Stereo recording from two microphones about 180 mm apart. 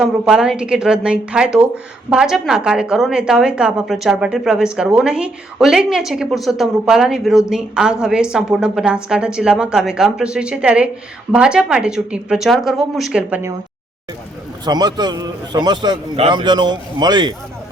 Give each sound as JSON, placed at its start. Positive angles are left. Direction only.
{"t": 0.0, "sound": "a woman's voice", "side_deg": -5}
{"t": 14.6, "sound": "a man's voice", "side_deg": -20}